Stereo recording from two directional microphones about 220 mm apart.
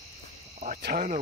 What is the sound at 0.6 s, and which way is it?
Cricket, 40° right (ahead or behind).